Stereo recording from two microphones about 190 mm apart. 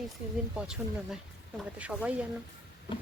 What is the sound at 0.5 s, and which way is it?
Speech, 5° right (ahead or behind).